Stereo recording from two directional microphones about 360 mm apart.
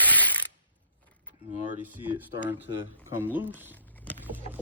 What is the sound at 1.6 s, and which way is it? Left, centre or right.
A man's voice, centre.